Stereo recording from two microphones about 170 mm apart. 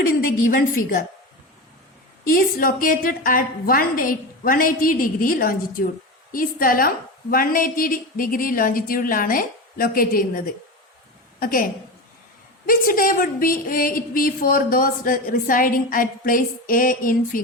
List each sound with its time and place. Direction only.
2.3 s a woman's voice: 55° left (ahead or behind)